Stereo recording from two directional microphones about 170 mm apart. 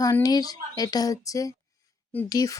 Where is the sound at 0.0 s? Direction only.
20° left (ahead or behind).